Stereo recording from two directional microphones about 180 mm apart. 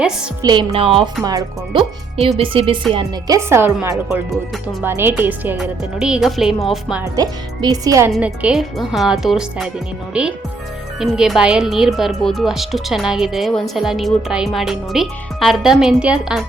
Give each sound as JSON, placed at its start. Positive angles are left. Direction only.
{"t": 0.4, "sound": "speech", "side_deg": -30}
{"t": 1.8, "sound": "speech", "side_deg": -35}
{"t": 3.3, "sound": "speech", "side_deg": -15}
{"t": 7.0, "sound": "speech", "side_deg": -20}
{"t": 8.1, "sound": "speech", "side_deg": -5}